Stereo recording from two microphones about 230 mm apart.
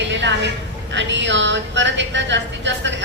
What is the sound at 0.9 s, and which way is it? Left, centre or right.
A woman's voice, right.